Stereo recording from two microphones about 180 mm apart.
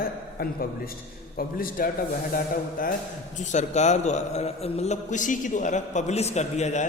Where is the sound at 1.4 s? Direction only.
50° left (ahead or behind).